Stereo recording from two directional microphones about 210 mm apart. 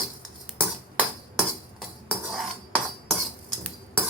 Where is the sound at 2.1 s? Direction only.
Centre (ahead or behind).